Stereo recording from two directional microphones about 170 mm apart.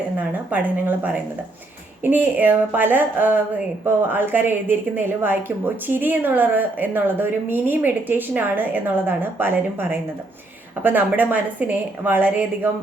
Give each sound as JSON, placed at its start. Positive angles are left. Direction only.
{"t": 0.2, "sound": "a woman's voice", "side_deg": -10}